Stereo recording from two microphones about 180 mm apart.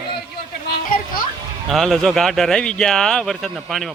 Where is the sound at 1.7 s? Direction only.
Centre (ahead or behind).